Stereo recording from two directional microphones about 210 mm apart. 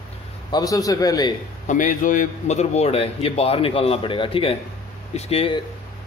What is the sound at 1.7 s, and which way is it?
A man's voice, 40° left (ahead or behind).